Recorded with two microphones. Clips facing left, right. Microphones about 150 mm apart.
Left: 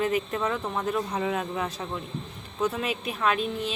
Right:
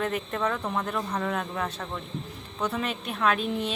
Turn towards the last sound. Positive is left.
turn(degrees=0)  # may be behind; listen again after turning